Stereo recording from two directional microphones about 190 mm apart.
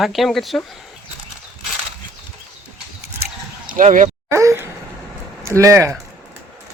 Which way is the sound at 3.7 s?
45° right (ahead or behind).